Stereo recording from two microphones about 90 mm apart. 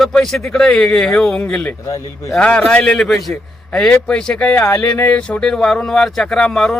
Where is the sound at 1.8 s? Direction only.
35° left (ahead or behind).